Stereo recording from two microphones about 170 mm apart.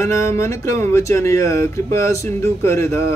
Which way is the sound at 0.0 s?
15° left (ahead or behind).